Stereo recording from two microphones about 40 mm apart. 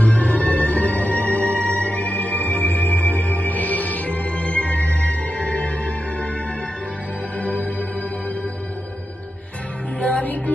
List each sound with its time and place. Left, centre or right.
0.0 s music: left
7.3 s music: left
10.0 s music: left